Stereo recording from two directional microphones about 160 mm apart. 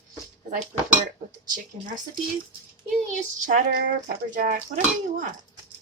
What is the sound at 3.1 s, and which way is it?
A woman's voice, 55° right (ahead or behind).